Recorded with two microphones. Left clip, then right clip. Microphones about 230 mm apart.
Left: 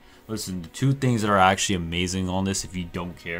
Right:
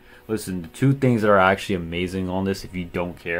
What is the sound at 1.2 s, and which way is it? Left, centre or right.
Speech, left.